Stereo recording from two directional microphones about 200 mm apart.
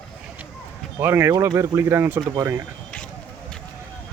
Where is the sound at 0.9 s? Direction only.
10° right (ahead or behind).